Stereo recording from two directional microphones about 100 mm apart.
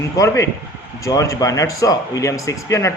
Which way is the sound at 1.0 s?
30° left (ahead or behind).